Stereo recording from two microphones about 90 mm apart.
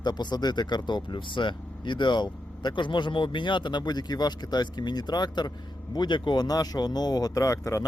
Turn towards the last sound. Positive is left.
turn(degrees=35)  # may be behind; listen again after turning